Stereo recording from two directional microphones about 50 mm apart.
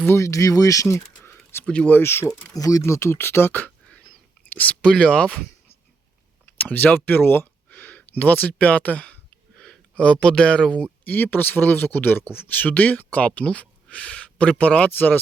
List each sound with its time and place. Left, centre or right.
0.1 s speech: left
1.6 s speech: left
1.9 s speech: left
2.8 s speech: left
4.8 s speech: left
6.6 s speech: left
7.7 s speech: left
11.0 s speech: left
14.8 s speech: left